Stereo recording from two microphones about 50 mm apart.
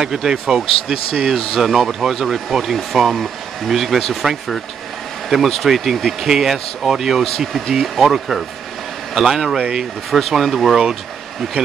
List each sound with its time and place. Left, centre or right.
0.0 s speech: centre
10.1 s speech: centre